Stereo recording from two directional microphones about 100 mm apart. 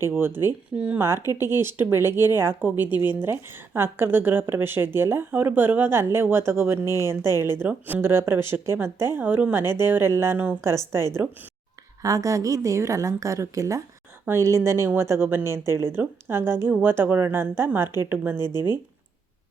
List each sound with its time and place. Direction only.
0.0 s speech: 25° right (ahead or behind)
12.0 s a woman's voice: 35° right (ahead or behind); by 18.3 s 20° right (ahead or behind)
18.3 s speech: 45° left (ahead or behind)